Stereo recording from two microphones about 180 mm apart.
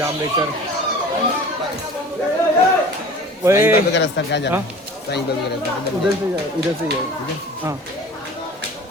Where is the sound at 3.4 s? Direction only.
15° right (ahead or behind).